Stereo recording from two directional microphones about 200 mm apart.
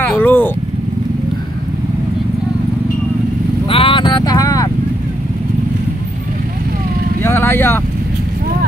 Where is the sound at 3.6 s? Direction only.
25° left (ahead or behind).